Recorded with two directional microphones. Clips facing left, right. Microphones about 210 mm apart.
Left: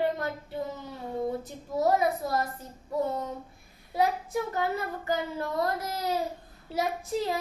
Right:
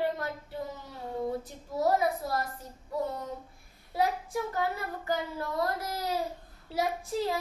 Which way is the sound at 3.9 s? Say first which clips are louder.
Left 2 dB; 20° left (ahead or behind).